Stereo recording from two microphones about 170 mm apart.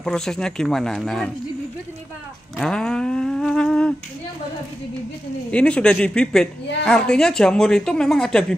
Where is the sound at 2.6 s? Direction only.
5° left (ahead or behind).